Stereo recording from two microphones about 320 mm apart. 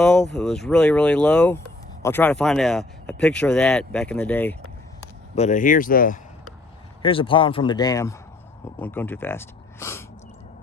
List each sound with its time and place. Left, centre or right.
0.0 s speech: centre
5.3 s speech: left